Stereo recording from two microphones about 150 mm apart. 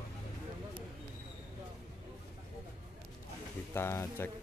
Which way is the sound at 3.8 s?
15° left (ahead or behind).